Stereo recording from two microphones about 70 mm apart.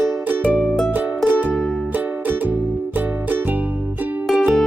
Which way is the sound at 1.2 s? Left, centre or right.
Centre.